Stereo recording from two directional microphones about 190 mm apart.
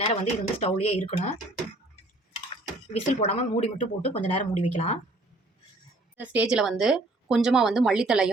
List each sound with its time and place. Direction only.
0.1 s a woman's voice: 35° left (ahead or behind)
3.1 s a woman's voice: 35° left (ahead or behind)
6.1 s a woman's voice: 5° right (ahead or behind)